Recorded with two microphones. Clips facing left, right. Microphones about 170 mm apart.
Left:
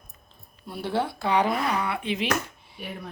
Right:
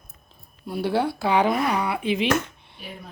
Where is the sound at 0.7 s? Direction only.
Centre (ahead or behind).